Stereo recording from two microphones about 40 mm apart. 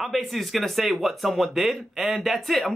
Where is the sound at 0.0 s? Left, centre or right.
Centre.